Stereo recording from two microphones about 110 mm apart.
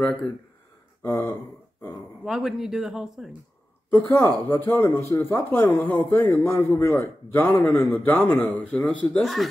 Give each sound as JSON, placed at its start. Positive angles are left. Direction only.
{"t": 1.0, "sound": "speech", "side_deg": 20}
{"t": 2.2, "sound": "speech", "side_deg": -5}
{"t": 3.9, "sound": "a man's voice", "side_deg": 25}